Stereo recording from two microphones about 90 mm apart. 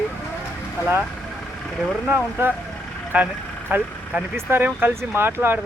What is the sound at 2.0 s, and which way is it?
Speech, 25° right (ahead or behind).